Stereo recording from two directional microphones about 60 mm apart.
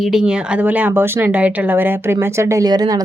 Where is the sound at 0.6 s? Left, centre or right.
Right.